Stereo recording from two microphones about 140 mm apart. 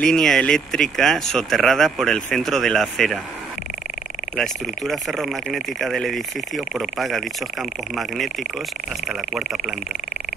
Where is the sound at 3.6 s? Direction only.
60° left (ahead or behind).